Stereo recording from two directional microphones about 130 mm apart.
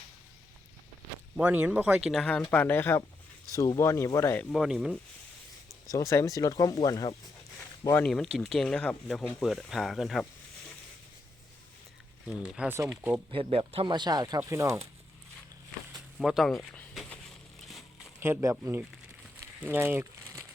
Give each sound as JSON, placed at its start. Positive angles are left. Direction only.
{"t": 1.4, "sound": "speech", "side_deg": -10}
{"t": 2.2, "sound": "speech", "side_deg": 10}
{"t": 4.5, "sound": "speech", "side_deg": -5}
{"t": 5.9, "sound": "speech", "side_deg": 25}
{"t": 8.0, "sound": "speech", "side_deg": 0}
{"t": 12.4, "sound": "speech", "side_deg": -10}
{"t": 13.3, "sound": "speech", "side_deg": -45}
{"t": 15.9, "sound": "a sound", "side_deg": -5}
{"t": 17.1, "sound": "crushing", "side_deg": 0}
{"t": 18.2, "sound": "speech", "side_deg": -20}
{"t": 19.4, "sound": "crumpling", "side_deg": -15}